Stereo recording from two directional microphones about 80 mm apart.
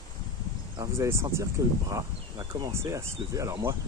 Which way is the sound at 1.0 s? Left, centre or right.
Right.